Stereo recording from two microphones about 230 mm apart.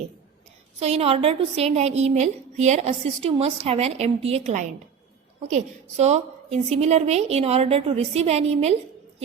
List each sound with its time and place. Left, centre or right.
0.8 s a woman's voice: right
6.0 s a woman's voice: right